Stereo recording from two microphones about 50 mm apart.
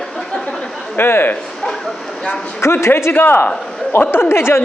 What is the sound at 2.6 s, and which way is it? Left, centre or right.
Speech, left.